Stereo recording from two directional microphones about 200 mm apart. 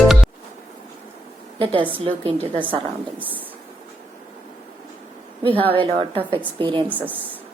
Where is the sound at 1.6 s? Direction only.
25° right (ahead or behind).